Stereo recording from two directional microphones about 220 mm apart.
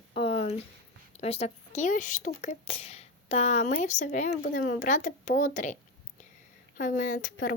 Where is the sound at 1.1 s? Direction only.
30° left (ahead or behind).